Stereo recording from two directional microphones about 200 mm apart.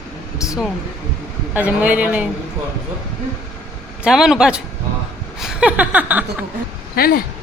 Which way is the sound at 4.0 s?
Centre (ahead or behind).